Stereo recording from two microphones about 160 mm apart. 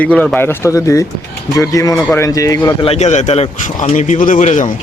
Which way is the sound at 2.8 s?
45° left (ahead or behind).